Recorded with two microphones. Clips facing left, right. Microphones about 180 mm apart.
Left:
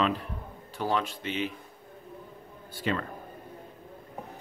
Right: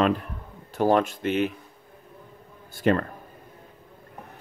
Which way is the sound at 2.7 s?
50° right (ahead or behind).